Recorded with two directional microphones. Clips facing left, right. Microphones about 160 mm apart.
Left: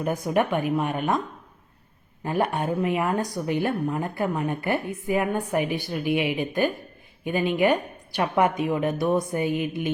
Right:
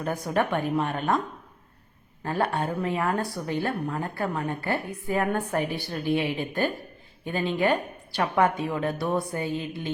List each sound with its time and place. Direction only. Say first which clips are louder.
0.0 s a woman's voice: left 3 dB; 15° left (ahead or behind)
2.2 s a woman's voice: left 2 dB; 15° left (ahead or behind)